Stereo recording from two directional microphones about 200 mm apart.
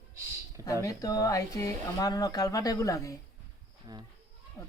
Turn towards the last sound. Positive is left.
turn(degrees=15)  # may be behind; listen again after turning